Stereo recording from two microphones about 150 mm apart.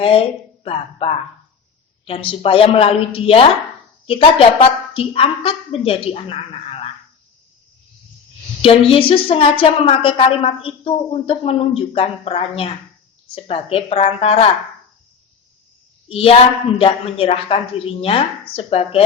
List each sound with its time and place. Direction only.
0.0 s a woman's voice: 40° left (ahead or behind)
8.6 s a woman's voice: 40° left (ahead or behind)
16.0 s a woman's voice: 40° left (ahead or behind)